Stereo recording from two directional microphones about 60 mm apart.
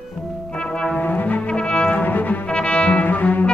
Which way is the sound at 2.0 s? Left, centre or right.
Left.